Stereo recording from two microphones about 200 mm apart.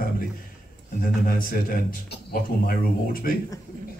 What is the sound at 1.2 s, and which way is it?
A man's voice, 45° left (ahead or behind).